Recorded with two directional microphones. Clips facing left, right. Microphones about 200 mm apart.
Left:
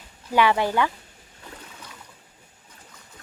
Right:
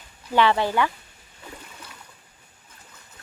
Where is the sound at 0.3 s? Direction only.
15° left (ahead or behind).